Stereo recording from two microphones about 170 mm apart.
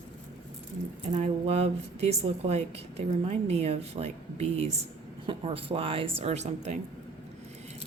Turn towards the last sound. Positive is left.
turn(degrees=-40)  # may be behind; listen again after turning